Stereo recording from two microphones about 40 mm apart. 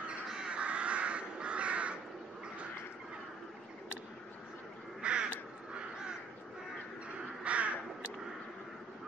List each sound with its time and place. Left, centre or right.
0.5 s crow: right
5.0 s crow: right
7.4 s crow: right